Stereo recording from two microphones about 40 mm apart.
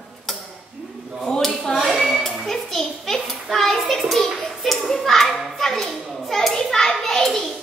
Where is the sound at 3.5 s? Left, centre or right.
Centre.